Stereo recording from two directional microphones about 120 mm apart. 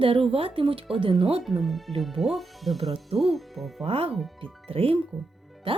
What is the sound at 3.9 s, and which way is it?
Speech, 55° right (ahead or behind).